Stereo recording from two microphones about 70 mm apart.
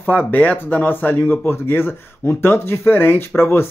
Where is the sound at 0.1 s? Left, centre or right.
Left.